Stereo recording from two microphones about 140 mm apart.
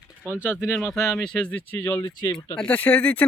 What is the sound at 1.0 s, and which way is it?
Speech, 5° left (ahead or behind).